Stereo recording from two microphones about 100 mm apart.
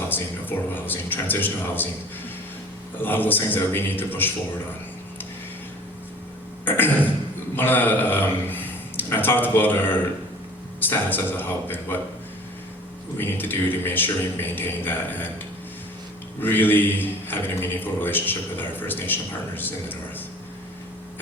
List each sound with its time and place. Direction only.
0.1 s a man's voice: 20° left (ahead or behind)
3.0 s a man's voice: 20° left (ahead or behind)
6.7 s a man's voice: 20° left (ahead or behind)
13.1 s a man's voice: 20° left (ahead or behind)
16.4 s a man's voice: 20° left (ahead or behind)